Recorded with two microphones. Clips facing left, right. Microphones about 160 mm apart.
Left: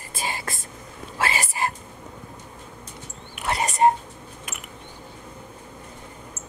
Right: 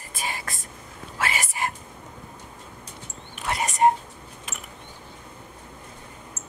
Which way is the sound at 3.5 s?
35° left (ahead or behind).